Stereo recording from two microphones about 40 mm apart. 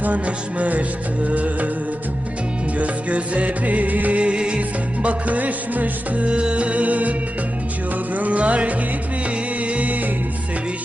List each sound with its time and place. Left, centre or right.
0.0 s music: right
2.7 s music: right
4.2 s music: right
5.0 s music: right
6.2 s music: right